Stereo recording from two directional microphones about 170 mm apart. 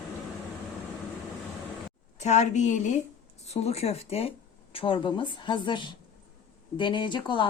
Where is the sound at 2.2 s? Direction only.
45° left (ahead or behind).